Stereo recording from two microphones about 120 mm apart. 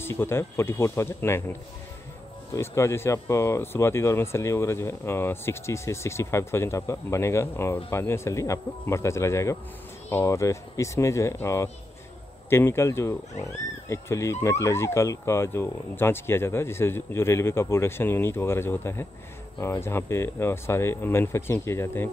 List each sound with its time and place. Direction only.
0.0 s speech: 20° left (ahead or behind)